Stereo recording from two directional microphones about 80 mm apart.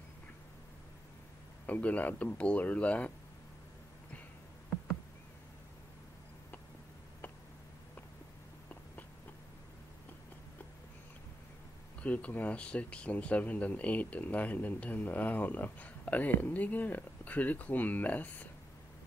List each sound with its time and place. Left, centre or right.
1.7 s speech: centre
12.0 s speech: centre